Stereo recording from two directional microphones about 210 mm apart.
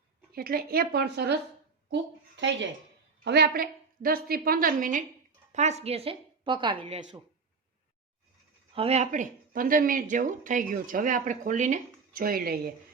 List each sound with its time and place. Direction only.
0.3 s a woman's voice: 45° right (ahead or behind); by 7.0 s 30° right (ahead or behind)
8.7 s speech: 30° right (ahead or behind); by 12.5 s 45° right (ahead or behind)